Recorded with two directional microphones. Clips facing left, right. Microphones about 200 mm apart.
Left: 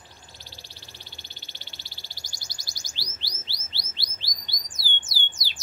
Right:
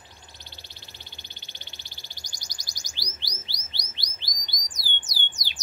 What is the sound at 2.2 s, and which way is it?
Chirp, 15° right (ahead or behind).